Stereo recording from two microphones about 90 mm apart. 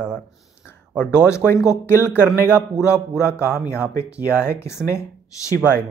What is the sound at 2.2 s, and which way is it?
Speech, 10° right (ahead or behind).